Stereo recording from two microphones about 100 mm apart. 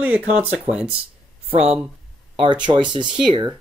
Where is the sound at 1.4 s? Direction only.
90° right.